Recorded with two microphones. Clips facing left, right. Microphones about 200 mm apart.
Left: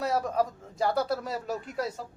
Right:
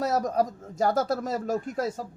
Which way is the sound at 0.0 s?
40° right (ahead or behind).